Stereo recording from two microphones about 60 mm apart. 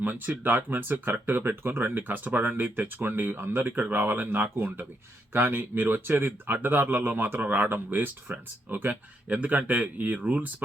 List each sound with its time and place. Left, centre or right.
0.0 s speech: right